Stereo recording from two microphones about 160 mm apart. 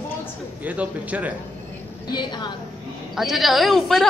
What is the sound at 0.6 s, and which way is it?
Speech, 10° right (ahead or behind).